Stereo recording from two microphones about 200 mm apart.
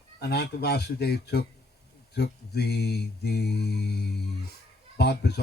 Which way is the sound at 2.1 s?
55° left (ahead or behind).